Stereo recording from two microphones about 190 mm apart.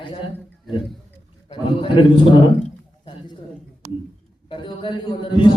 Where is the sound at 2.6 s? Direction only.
30° left (ahead or behind).